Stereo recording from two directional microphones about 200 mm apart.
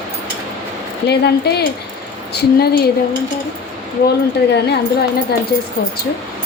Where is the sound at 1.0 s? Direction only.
55° left (ahead or behind).